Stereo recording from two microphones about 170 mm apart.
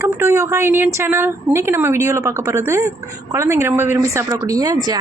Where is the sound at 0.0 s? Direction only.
15° right (ahead or behind).